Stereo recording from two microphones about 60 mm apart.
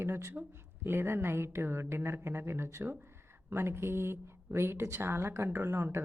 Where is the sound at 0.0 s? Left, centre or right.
Right.